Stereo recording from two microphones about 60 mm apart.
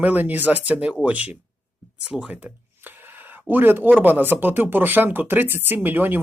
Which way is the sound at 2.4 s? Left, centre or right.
Right.